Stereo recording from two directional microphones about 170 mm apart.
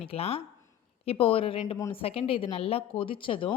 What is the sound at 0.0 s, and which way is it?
Speech, 35° left (ahead or behind).